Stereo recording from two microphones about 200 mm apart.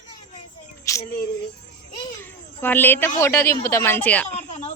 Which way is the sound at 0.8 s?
15° left (ahead or behind).